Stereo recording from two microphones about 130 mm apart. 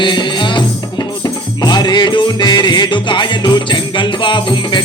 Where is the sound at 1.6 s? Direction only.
35° left (ahead or behind).